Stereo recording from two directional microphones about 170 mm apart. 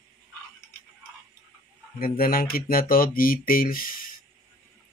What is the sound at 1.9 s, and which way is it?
Speech, 60° left (ahead or behind).